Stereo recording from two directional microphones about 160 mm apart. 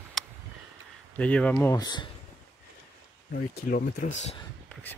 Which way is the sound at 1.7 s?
25° left (ahead or behind).